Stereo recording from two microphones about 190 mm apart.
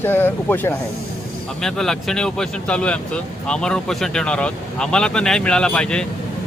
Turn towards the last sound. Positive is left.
turn(degrees=5)  # may be behind; listen again after turning